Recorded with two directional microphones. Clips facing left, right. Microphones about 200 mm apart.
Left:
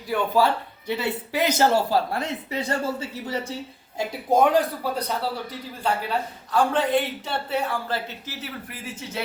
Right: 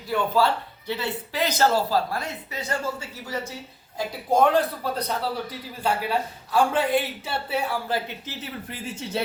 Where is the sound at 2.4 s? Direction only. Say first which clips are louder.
Left 3 dB; 30° left (ahead or behind).